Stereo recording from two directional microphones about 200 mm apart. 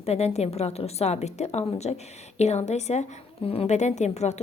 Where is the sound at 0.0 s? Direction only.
30° left (ahead or behind).